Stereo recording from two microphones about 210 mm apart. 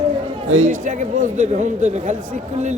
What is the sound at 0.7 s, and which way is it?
A man's voice, 35° right (ahead or behind).